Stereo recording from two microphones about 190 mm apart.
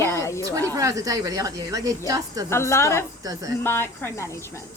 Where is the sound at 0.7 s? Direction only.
15° right (ahead or behind).